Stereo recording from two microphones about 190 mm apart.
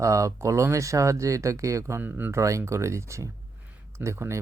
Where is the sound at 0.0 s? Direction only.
15° right (ahead or behind).